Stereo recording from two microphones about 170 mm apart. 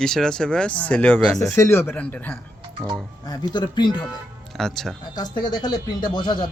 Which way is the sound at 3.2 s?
25° left (ahead or behind).